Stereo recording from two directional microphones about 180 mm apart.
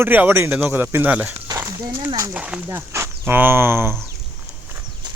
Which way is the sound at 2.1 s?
20° right (ahead or behind).